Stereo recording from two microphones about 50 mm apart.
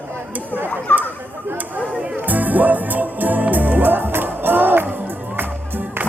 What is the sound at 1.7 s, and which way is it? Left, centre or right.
Music, right.